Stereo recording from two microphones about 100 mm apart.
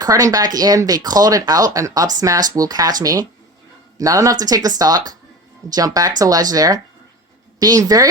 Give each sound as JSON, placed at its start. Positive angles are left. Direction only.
{"t": 0.0, "sound": "speech", "side_deg": -35}